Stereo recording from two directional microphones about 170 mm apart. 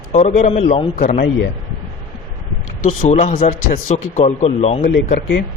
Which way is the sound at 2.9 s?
40° left (ahead or behind).